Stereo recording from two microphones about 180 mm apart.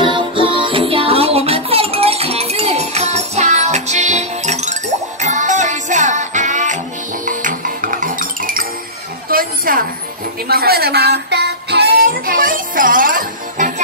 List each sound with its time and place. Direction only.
0.0 s music: 30° right (ahead or behind); by 8.6 s 50° right (ahead or behind)
9.3 s a sound: 50° right (ahead or behind)
10.5 s child singing: 60° right (ahead or behind)